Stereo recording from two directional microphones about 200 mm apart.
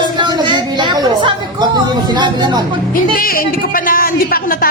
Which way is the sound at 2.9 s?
45° left (ahead or behind).